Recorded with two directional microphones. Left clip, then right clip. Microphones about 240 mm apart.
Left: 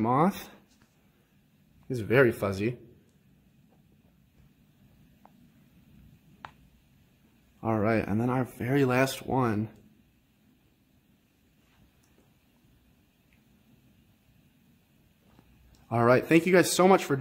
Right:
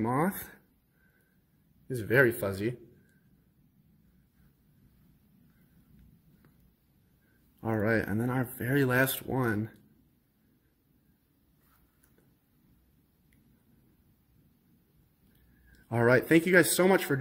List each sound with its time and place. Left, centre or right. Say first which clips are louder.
0.0 s speech: left 5 dB; centre
2.0 s speech: left 2 dB; centre
7.6 s speech: left 2 dB; centre
15.9 s speech: left 2 dB; centre